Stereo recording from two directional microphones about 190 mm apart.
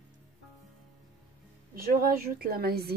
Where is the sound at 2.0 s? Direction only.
50° right (ahead or behind).